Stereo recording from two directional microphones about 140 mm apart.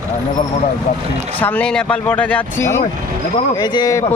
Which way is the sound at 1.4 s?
10° left (ahead or behind).